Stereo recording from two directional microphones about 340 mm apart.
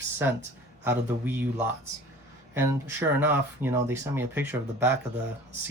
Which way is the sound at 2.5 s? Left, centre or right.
Centre.